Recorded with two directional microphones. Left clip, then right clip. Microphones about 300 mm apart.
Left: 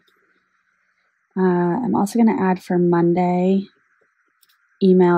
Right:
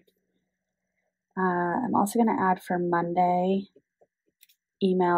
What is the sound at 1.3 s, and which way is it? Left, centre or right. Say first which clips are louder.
Speech: left 6 dB; left.